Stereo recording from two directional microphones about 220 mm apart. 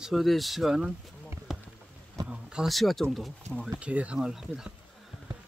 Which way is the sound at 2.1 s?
5° right (ahead or behind).